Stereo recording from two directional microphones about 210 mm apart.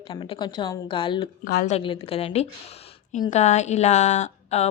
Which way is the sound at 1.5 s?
45° left (ahead or behind).